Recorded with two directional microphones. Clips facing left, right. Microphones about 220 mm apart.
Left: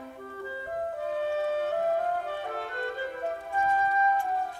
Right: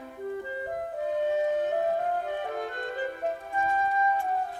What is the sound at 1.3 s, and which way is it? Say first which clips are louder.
Music: right 2 dB; 15° right (ahead or behind).